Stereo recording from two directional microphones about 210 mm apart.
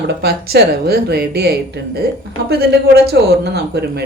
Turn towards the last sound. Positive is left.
turn(degrees=-50)  # may be behind; listen again after turning